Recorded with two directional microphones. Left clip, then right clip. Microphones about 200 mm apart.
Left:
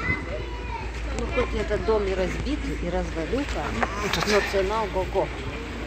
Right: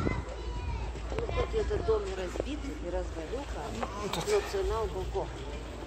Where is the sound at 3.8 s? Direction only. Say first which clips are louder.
Left 11 dB; 20° left (ahead or behind).